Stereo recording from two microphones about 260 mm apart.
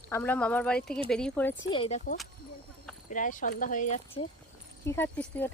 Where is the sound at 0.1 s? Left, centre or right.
Centre.